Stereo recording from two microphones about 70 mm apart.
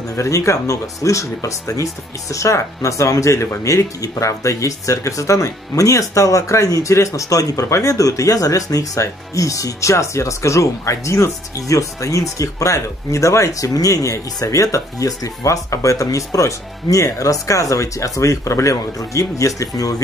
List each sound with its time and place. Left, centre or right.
0.1 s speech: left